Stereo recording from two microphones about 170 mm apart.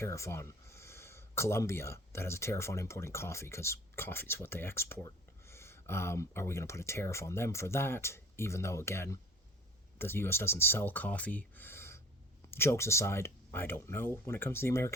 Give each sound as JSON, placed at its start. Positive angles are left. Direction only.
{"t": 0.0, "sound": "speech", "side_deg": 15}